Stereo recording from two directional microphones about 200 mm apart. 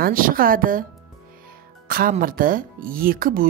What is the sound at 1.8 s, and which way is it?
Speech, 45° right (ahead or behind).